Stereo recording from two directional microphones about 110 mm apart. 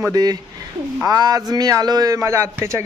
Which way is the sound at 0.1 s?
35° right (ahead or behind).